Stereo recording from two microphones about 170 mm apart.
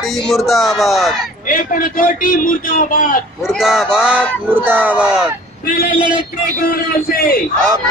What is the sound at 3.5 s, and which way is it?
A man's voice, centre (ahead or behind).